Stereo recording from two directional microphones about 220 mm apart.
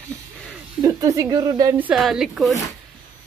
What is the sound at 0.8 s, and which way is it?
Speech, 15° right (ahead or behind).